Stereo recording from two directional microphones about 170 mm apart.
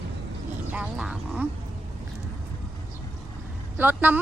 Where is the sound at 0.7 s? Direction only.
5° right (ahead or behind).